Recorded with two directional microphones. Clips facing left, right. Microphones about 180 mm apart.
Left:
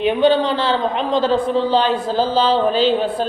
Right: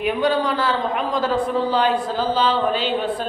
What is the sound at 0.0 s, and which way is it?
A man's voice, 25° left (ahead or behind).